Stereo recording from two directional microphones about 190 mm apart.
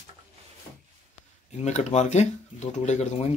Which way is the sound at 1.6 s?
40° left (ahead or behind).